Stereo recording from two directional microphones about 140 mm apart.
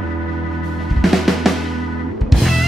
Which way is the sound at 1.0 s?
Centre (ahead or behind).